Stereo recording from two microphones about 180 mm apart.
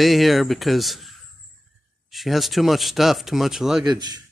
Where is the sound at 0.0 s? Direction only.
Centre (ahead or behind).